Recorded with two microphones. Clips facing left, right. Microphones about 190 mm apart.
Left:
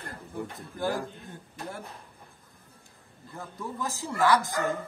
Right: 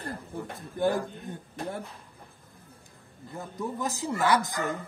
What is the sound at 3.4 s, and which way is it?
A man's voice, 20° right (ahead or behind).